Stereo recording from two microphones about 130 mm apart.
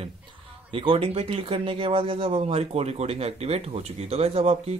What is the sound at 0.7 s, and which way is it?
Speech, 45° right (ahead or behind).